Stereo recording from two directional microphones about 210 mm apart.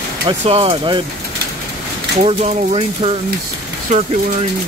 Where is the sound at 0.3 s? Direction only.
25° right (ahead or behind).